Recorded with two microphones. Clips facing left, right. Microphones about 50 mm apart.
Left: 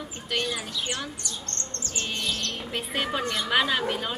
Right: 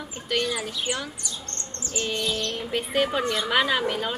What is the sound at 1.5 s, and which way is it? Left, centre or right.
Chirp, centre.